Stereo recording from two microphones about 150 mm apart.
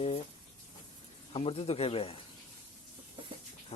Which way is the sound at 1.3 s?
40° left (ahead or behind).